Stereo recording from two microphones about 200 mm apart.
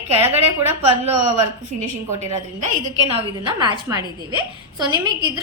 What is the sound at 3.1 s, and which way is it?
Speech, 30° right (ahead or behind).